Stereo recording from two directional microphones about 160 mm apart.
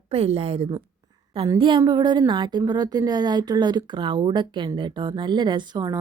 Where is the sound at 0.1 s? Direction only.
40° right (ahead or behind).